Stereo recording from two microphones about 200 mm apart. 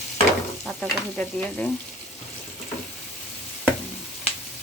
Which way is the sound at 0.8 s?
5° left (ahead or behind).